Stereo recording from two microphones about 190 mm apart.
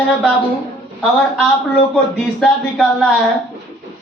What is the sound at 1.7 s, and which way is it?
Speech, 5° left (ahead or behind).